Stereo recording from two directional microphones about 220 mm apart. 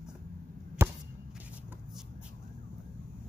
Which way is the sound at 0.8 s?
10° right (ahead or behind).